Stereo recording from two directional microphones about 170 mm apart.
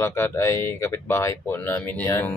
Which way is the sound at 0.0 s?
15° left (ahead or behind).